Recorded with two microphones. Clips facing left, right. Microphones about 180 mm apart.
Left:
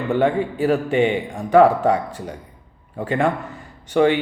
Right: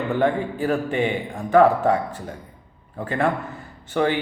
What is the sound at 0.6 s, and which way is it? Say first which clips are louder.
A man's voice: left 4 dB; 20° left (ahead or behind).